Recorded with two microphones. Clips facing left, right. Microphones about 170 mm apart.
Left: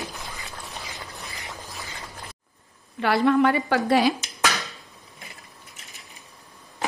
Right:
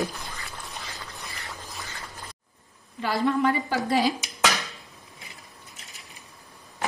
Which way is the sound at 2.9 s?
70° left (ahead or behind).